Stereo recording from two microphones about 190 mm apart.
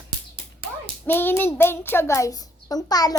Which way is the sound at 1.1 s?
10° left (ahead or behind).